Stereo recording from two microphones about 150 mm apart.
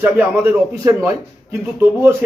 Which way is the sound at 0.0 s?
15° right (ahead or behind).